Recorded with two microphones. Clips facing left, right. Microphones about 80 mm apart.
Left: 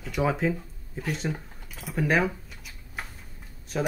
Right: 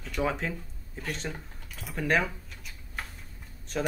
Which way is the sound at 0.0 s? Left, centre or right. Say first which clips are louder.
Left 4 dB; centre.